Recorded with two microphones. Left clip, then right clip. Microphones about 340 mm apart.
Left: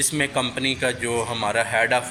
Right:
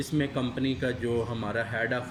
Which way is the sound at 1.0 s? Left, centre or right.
Left.